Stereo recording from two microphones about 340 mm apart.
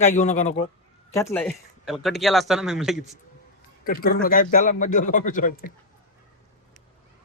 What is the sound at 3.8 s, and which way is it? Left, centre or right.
A man's voice, left.